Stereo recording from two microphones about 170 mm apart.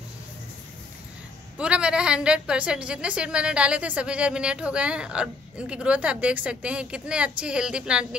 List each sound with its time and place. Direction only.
1.6 s a woman's voice: 5° right (ahead or behind)